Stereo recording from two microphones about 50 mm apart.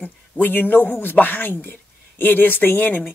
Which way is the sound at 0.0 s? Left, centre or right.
Left.